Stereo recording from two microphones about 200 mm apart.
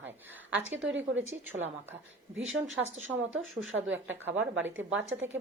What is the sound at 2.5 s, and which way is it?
Speech, 75° right (ahead or behind).